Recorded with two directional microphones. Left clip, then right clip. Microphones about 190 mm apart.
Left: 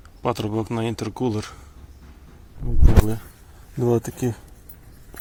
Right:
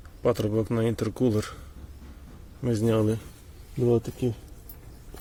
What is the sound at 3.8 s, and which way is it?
Speech, 20° left (ahead or behind).